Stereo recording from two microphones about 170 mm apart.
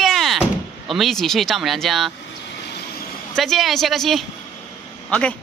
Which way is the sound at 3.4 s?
Centre (ahead or behind).